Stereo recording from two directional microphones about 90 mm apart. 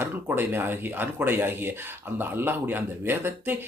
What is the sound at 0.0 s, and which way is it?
Speech, 25° right (ahead or behind).